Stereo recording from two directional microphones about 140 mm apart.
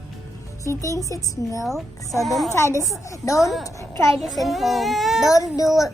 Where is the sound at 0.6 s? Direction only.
25° left (ahead or behind).